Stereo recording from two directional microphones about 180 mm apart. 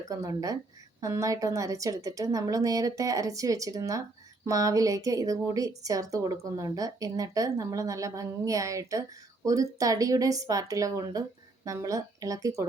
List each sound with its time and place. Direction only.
0.1 s a woman's voice: 20° right (ahead or behind)